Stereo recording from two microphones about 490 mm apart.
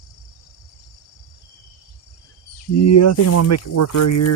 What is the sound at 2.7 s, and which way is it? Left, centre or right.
Speech, left.